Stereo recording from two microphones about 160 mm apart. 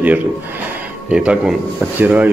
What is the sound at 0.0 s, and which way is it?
Speech, 10° right (ahead or behind).